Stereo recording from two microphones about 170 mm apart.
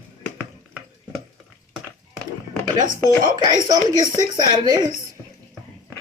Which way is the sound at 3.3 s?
25° right (ahead or behind).